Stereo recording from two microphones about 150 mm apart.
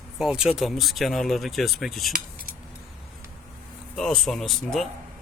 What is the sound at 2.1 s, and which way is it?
Keys jangling, 70° right (ahead or behind).